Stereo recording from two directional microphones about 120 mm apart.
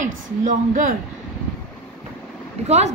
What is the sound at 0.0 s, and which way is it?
Speech, 90° right.